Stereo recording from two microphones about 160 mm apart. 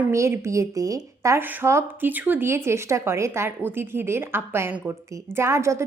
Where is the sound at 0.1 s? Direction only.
20° right (ahead or behind).